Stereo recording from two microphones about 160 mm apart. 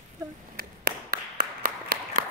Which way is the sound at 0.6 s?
65° right (ahead or behind).